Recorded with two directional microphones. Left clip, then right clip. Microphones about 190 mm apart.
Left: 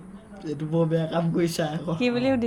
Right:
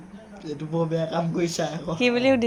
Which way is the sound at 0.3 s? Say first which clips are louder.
Left 2 dB; 35° left (ahead or behind).